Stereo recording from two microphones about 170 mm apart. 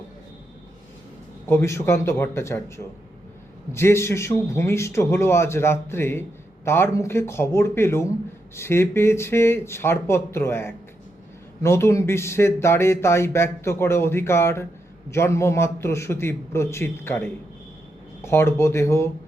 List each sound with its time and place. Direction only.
1.5 s speech: 15° left (ahead or behind)